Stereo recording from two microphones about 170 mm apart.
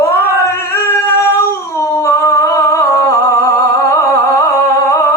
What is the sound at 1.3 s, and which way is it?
Humming, 15° left (ahead or behind).